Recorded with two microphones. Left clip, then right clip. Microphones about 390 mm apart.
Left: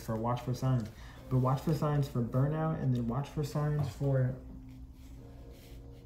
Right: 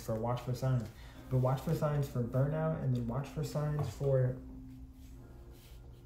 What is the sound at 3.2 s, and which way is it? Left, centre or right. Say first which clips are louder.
Speech: left 3 dB; centre.